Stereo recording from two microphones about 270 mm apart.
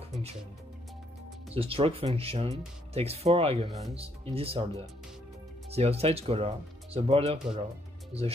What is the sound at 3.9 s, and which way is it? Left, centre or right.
Speech, right.